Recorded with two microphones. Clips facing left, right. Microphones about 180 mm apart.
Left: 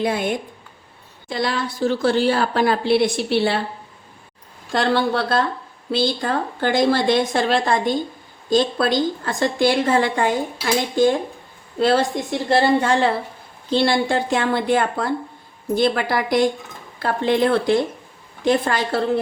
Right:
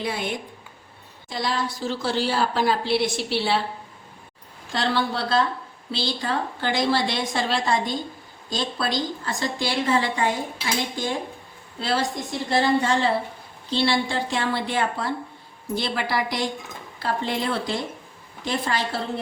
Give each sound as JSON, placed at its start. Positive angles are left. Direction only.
{"t": 0.0, "sound": "a woman's voice", "side_deg": 50}
{"t": 4.7, "sound": "a woman's voice", "side_deg": 55}
{"t": 11.8, "sound": "a woman's voice", "side_deg": 55}